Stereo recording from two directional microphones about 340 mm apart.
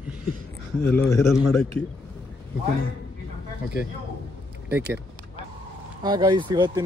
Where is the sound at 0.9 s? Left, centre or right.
Centre.